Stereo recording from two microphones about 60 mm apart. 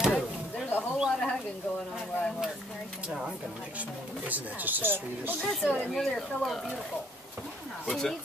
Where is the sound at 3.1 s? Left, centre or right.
Centre.